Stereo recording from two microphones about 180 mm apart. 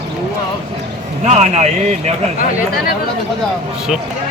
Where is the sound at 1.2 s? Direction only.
40° right (ahead or behind).